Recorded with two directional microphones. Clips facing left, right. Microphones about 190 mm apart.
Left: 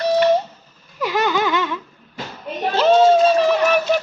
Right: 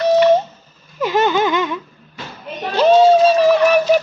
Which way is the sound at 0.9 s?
25° right (ahead or behind).